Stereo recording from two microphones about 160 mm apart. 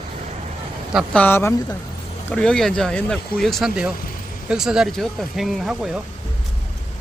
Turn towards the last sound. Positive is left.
turn(degrees=-5)  # may be behind; listen again after turning